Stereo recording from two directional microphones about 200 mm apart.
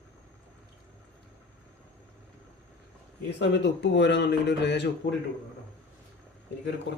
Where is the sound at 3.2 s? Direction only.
60° left (ahead or behind).